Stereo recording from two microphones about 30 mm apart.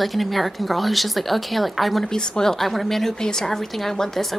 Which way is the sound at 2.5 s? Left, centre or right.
Centre.